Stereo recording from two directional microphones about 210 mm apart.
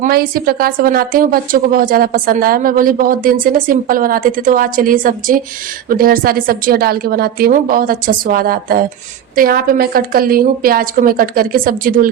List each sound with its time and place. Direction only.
0.0 s a woman's voice: 45° right (ahead or behind)